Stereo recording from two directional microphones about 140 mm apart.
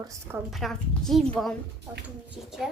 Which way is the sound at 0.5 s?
Centre (ahead or behind).